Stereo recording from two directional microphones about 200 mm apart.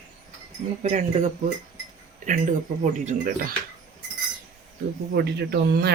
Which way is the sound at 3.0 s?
45° right (ahead or behind).